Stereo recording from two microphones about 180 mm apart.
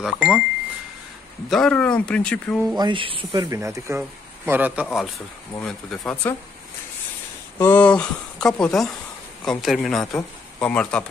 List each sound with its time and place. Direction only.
0.0 s speech: 5° right (ahead or behind)
1.5 s speech: 5° left (ahead or behind)
2.7 s a man's voice: 25° right (ahead or behind); by 4.8 s 10° right (ahead or behind)
5.6 s speech: 5° left (ahead or behind)
7.5 s speech: 10° left (ahead or behind)